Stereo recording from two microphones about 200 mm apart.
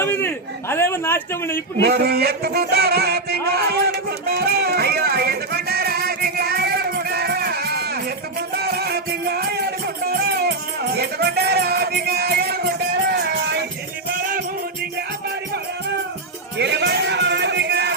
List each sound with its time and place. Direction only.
0.0 s a man's voice: 10° left (ahead or behind)
1.8 s music: 55° right (ahead or behind)
14.1 s music: 45° right (ahead or behind)
16.6 s a sound: 60° right (ahead or behind)